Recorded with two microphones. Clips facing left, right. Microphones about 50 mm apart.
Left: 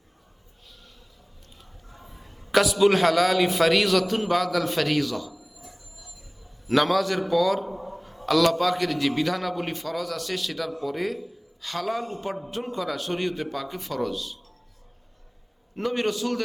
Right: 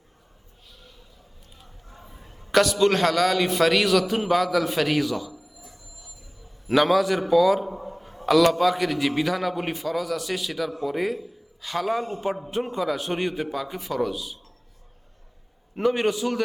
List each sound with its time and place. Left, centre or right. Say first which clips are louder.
2.5 s a man's voice: even; centre
6.7 s a man's voice: right 2 dB; centre
15.7 s a man's voice: right 4 dB; centre